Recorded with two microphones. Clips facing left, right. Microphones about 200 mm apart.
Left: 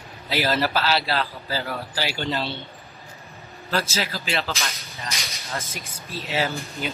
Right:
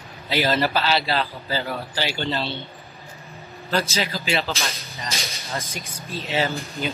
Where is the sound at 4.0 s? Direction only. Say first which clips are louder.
Right 3 dB; centre (ahead or behind).